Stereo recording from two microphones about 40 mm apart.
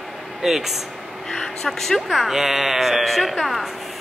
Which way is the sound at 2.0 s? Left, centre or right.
Centre.